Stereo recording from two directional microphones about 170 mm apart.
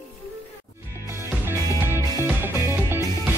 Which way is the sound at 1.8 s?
15° right (ahead or behind).